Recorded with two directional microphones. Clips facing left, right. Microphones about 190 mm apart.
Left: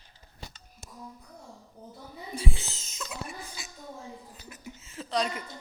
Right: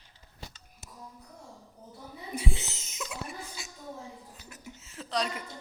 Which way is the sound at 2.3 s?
20° right (ahead or behind).